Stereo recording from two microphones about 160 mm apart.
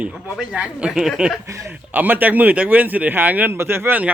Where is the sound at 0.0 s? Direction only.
5° right (ahead or behind).